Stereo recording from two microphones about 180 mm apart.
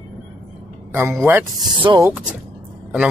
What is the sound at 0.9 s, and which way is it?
Speech, 15° right (ahead or behind).